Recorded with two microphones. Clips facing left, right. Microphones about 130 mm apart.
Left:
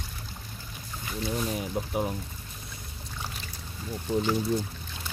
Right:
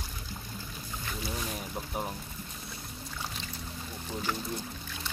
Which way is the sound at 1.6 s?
5° left (ahead or behind).